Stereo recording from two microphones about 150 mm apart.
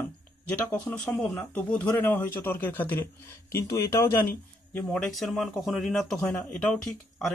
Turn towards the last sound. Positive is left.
turn(degrees=5)  # may be behind; listen again after turning